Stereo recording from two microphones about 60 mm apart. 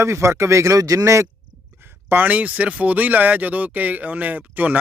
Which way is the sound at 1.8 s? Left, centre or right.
Right.